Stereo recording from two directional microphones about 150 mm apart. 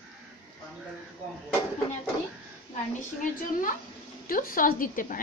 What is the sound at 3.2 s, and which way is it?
A woman's voice, 65° left (ahead or behind).